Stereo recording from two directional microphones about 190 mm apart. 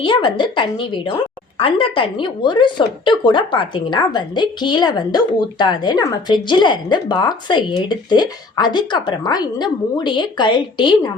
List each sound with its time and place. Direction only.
0.0 s a woman's voice: 25° left (ahead or behind)